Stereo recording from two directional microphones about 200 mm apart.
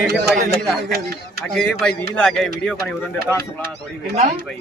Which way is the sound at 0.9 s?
50° right (ahead or behind).